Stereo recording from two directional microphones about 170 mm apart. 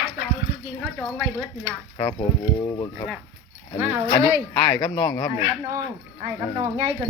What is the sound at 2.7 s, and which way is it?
Speech, 30° left (ahead or behind).